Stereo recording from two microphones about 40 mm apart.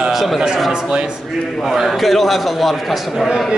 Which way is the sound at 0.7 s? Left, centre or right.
Right.